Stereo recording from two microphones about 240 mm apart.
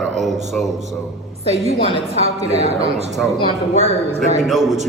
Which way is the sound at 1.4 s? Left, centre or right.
Right.